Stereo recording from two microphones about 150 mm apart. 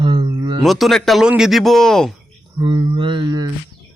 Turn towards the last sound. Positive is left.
turn(degrees=-25)  # may be behind; listen again after turning